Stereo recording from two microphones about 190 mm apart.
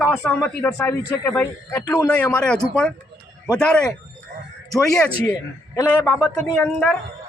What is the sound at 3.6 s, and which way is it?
Speech, 5° left (ahead or behind).